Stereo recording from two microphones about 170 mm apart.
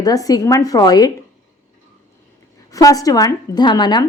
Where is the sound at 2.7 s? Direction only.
20° left (ahead or behind).